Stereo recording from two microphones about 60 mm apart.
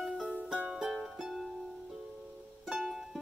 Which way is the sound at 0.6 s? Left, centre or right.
Centre.